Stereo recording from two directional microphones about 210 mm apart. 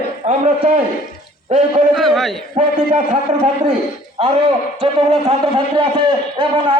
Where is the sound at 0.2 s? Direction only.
35° right (ahead or behind).